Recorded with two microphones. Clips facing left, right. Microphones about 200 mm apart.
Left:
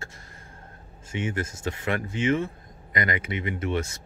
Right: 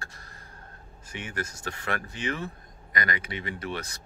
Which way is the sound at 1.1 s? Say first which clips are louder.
Left 6 dB; 25° left (ahead or behind).